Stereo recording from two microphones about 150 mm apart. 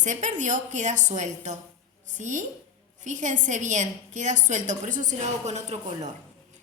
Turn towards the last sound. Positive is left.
turn(degrees=-50)  # may be behind; listen again after turning